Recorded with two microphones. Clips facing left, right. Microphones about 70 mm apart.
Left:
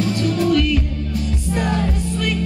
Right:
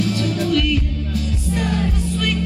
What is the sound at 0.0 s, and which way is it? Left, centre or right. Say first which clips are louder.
Music: left 2 dB; left.